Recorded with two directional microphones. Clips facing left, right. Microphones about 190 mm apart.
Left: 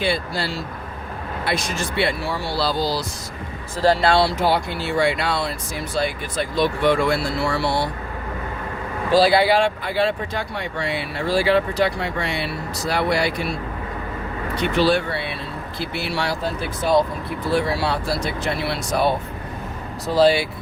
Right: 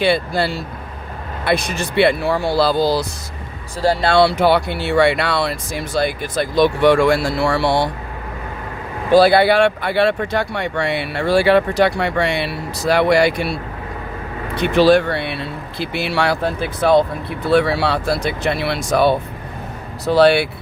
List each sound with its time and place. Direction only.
0.0 s speech: 65° right (ahead or behind)
4.1 s speech: 65° right (ahead or behind); by 7.9 s 80° right
9.1 s speech: 60° right (ahead or behind)
14.6 s speech: 75° right (ahead or behind)
15.9 s speech: 80° right; by 20.5 s 65° right (ahead or behind)